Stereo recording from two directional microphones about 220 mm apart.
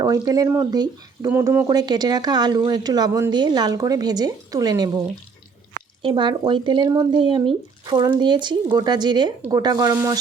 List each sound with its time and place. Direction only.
0.0 s speech: 15° right (ahead or behind)
6.0 s speech: 20° right (ahead or behind)